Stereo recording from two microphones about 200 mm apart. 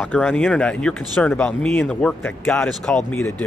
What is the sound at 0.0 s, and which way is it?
Speech, 5° left (ahead or behind).